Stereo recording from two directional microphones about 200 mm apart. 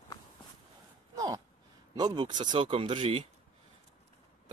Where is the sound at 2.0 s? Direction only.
20° right (ahead or behind).